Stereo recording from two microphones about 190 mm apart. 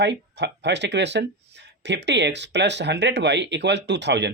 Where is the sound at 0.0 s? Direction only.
65° right (ahead or behind).